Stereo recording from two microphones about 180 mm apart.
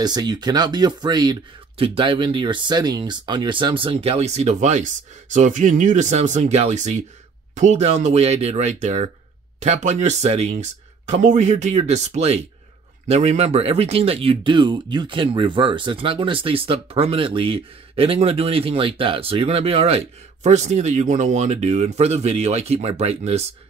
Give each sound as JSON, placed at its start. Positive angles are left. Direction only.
{"t": 0.0, "sound": "speech", "side_deg": -25}